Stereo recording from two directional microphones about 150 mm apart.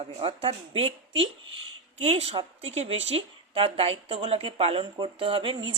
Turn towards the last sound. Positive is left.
turn(degrees=-35)  # may be behind; listen again after turning